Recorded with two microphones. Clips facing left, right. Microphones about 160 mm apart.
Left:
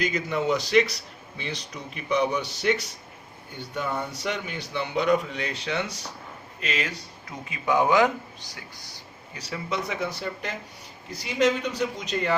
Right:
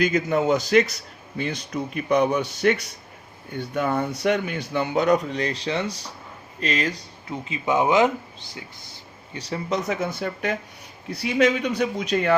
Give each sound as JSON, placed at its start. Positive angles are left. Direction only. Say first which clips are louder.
{"t": 0.0, "sound": "speech", "louder": "right 5 dB", "side_deg": -50}
{"t": 7.4, "sound": "speech", "louder": "right 1 dB", "side_deg": -20}
{"t": 9.3, "sound": "speech", "louder": "right 5 dB", "side_deg": -35}
{"t": 11.1, "sound": "a man's voice", "louder": "right 3 dB", "side_deg": -60}